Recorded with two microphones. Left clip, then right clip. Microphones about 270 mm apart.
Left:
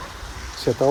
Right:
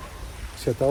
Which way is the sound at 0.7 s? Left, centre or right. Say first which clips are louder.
Left 4 dB; centre.